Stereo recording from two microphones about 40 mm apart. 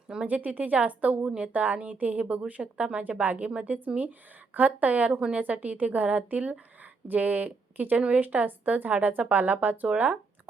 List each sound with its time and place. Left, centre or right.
0.3 s a woman's voice: right
1.2 s a woman's voice: right
1.5 s a woman's voice: right
3.0 s a woman's voice: right